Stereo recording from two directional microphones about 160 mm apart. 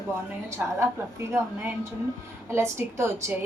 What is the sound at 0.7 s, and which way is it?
A woman's voice, 15° right (ahead or behind).